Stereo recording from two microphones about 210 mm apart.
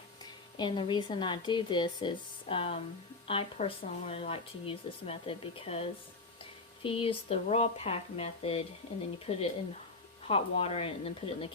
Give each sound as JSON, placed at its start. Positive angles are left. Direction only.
{"t": 0.5, "sound": "speech", "side_deg": 20}